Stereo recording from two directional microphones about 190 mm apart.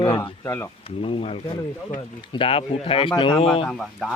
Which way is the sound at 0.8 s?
30° left (ahead or behind).